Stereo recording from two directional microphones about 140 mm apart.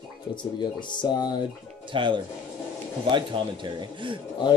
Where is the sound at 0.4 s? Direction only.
35° left (ahead or behind).